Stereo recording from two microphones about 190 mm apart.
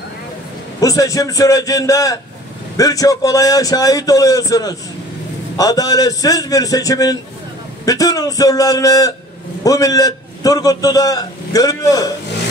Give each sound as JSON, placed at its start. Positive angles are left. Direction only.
{"t": 0.7, "sound": "a man's voice", "side_deg": 20}